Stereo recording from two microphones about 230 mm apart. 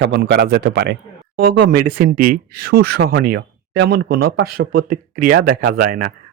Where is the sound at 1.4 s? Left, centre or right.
Right.